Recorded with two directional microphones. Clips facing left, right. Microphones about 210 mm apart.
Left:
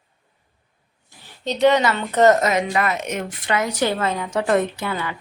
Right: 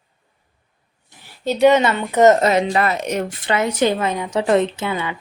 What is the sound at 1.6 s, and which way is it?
Speech, 20° right (ahead or behind).